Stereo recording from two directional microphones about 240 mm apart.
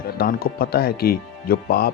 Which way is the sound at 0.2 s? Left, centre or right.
Left.